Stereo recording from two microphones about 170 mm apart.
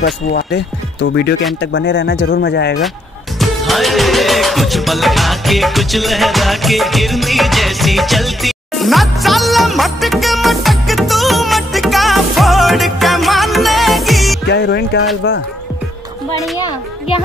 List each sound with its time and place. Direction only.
0.0 s speech: 70° left (ahead or behind)
3.3 s music: centre (ahead or behind)
14.5 s speech: 90° left
16.5 s a woman's voice: 25° left (ahead or behind)